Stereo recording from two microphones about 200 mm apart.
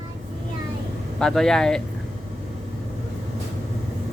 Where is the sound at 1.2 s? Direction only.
5° left (ahead or behind).